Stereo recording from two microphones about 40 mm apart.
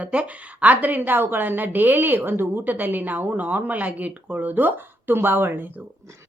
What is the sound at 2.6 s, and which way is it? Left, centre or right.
A woman's voice, right.